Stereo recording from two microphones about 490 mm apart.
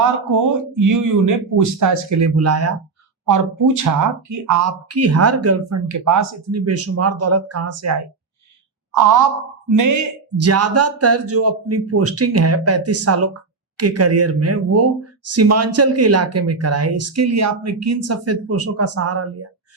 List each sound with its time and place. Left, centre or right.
0.3 s speech: right